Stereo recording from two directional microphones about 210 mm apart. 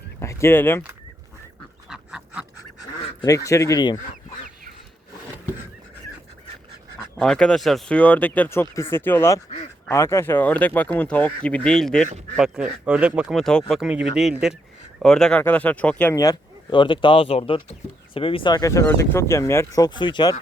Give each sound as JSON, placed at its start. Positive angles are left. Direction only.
{"t": 0.2, "sound": "speech", "side_deg": 15}
{"t": 1.9, "sound": "duck", "side_deg": -5}
{"t": 3.2, "sound": "speech", "side_deg": 15}
{"t": 7.2, "sound": "speech", "side_deg": 5}
{"t": 16.1, "sound": "speech", "side_deg": 15}